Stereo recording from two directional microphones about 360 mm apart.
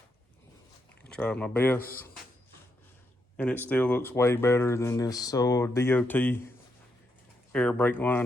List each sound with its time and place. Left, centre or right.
1.0 s speech: centre
3.3 s speech: centre
7.5 s speech: centre